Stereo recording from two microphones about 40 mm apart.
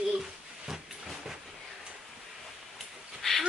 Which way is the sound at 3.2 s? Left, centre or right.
Centre.